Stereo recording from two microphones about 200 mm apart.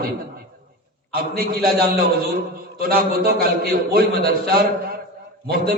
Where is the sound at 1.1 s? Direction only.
50° right (ahead or behind).